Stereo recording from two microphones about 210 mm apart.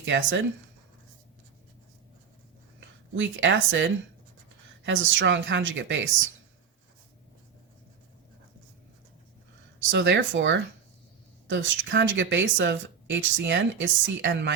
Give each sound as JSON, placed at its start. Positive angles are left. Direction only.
{"t": 0.0, "sound": "speech", "side_deg": -60}
{"t": 3.2, "sound": "speech", "side_deg": -60}
{"t": 9.9, "sound": "speech", "side_deg": -60}